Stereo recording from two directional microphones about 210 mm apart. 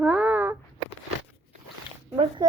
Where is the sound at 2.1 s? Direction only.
25° right (ahead or behind).